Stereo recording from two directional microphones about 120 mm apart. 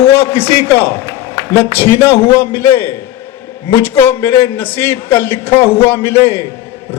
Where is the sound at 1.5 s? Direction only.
25° left (ahead or behind).